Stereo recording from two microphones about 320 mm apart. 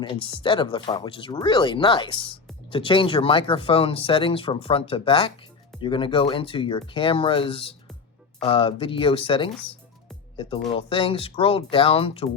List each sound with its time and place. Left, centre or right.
0.0 s speech: centre